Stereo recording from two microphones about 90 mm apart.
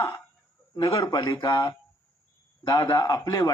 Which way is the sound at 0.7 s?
40° left (ahead or behind).